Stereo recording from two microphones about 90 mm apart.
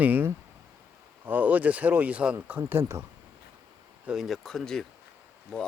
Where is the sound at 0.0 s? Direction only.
20° right (ahead or behind).